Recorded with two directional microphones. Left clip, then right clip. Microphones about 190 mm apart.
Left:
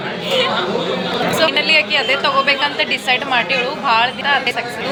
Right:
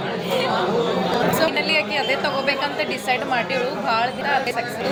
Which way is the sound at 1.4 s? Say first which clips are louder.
Left 6 dB; centre (ahead or behind).